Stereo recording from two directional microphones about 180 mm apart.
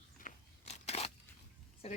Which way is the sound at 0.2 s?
40° left (ahead or behind).